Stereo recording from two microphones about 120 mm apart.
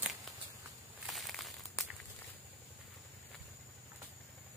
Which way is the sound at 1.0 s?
Centre (ahead or behind).